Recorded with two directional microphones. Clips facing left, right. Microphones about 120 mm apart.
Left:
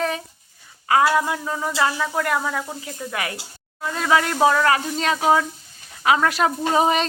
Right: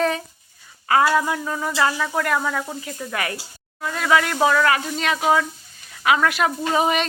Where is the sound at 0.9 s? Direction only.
15° left (ahead or behind).